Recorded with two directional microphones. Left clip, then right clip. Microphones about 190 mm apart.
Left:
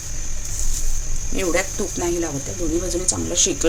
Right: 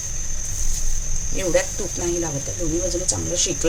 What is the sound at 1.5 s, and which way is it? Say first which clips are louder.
Speech: right 1 dB; 15° left (ahead or behind).